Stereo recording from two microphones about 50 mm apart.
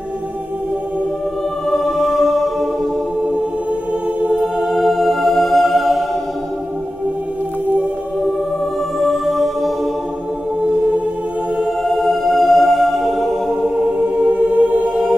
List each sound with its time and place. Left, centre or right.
1.7 s music: centre
4.4 s music: centre
9.0 s music: centre
12.0 s music: centre
14.0 s music: right